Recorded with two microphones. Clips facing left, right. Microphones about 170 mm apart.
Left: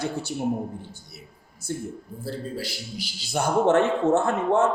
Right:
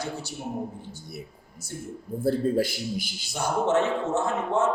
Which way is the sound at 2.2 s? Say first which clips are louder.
Right 9 dB; 50° right (ahead or behind).